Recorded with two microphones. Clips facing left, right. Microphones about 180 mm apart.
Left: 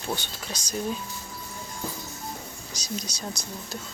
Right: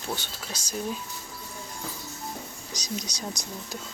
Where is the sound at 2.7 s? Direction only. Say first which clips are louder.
Even; 15° right (ahead or behind).